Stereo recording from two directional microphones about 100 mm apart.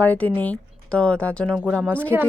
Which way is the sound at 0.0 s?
15° left (ahead or behind).